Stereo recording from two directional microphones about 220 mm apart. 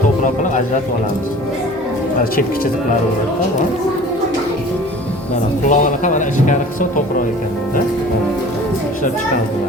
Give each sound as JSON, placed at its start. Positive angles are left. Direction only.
{"t": 5.6, "sound": "speech", "side_deg": 35}